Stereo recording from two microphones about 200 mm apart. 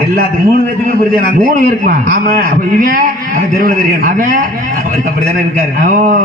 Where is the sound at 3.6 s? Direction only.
45° right (ahead or behind).